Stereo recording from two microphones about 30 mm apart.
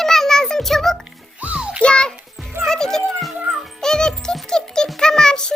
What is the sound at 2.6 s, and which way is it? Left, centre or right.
Music, centre.